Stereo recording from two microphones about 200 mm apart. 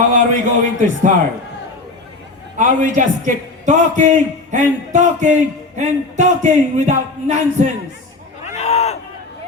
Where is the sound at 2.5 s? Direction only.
40° right (ahead or behind).